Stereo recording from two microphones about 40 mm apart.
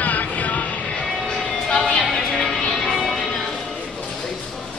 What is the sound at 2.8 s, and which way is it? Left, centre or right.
Music, centre.